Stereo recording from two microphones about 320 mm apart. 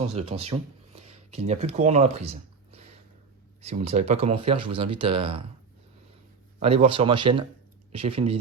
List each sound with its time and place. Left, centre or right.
0.0 s speech: centre
6.6 s speech: centre